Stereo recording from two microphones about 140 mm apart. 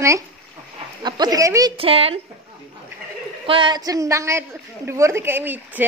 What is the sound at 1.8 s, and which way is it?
Speech, 40° right (ahead or behind).